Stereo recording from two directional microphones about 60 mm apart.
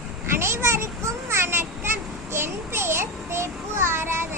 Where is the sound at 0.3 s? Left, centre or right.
Right.